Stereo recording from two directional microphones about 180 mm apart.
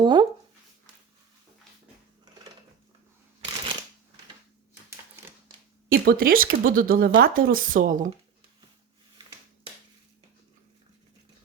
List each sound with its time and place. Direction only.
0.0 s speech: 25° right (ahead or behind)
5.9 s speech: 55° right (ahead or behind)